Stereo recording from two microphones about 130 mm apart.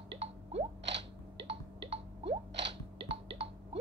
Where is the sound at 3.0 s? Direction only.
50° right (ahead or behind).